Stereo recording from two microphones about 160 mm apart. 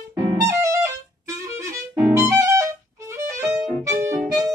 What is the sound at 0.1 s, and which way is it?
Music, 20° right (ahead or behind).